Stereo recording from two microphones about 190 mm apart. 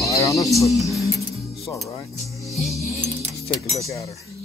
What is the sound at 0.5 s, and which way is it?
Speech, centre (ahead or behind).